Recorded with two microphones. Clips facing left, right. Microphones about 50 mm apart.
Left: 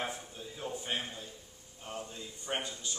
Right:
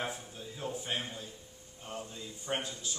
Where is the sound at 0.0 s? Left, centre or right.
Centre.